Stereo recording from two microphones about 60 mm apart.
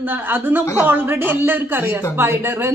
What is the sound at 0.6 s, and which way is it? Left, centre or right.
Speech, left.